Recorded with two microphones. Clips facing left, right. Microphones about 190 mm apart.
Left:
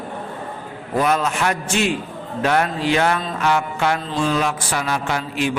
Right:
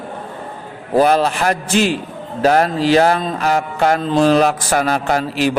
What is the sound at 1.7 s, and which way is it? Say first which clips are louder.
Speech: right 5 dB; centre (ahead or behind).